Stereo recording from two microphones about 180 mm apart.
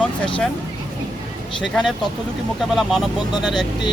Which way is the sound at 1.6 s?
Centre (ahead or behind).